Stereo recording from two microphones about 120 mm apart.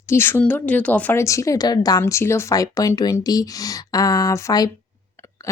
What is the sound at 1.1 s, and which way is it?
A woman's voice, 25° left (ahead or behind).